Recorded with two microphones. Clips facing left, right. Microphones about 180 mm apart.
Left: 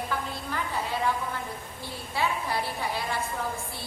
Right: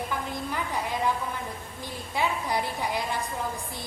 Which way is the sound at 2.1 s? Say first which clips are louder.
Right 1 dB; 15° right (ahead or behind).